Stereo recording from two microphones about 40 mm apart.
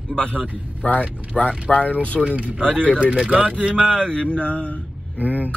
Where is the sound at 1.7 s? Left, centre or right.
Left.